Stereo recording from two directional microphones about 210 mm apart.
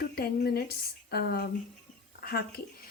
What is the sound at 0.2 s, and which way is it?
Speech, 45° left (ahead or behind).